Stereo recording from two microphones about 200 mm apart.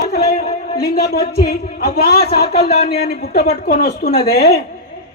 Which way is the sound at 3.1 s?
50° left (ahead or behind).